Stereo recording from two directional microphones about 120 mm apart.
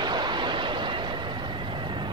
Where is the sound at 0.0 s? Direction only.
40° right (ahead or behind).